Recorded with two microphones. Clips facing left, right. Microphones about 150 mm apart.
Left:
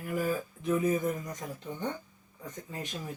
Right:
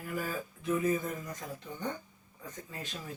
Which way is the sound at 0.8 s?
20° left (ahead or behind).